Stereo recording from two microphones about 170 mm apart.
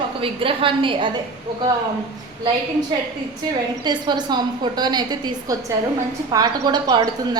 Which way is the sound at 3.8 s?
25° right (ahead or behind).